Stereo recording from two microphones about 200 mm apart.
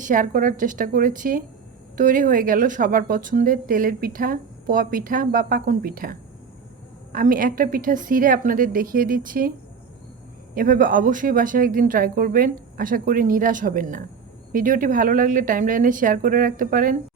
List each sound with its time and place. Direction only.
0.0 s a woman's voice: 40° right (ahead or behind)
10.5 s a woman's voice: 45° right (ahead or behind)